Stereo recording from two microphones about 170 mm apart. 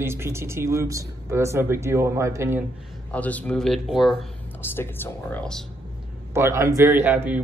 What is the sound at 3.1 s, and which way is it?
Speech, 10° left (ahead or behind).